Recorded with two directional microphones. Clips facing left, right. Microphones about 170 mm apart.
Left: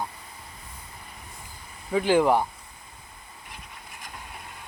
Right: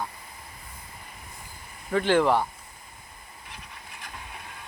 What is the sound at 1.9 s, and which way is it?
Speech, 10° left (ahead or behind).